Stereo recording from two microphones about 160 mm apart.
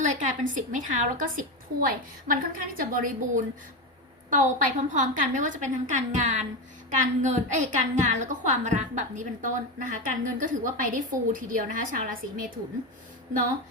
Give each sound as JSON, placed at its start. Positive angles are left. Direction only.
{"t": 0.0, "sound": "a woman's voice", "side_deg": -50}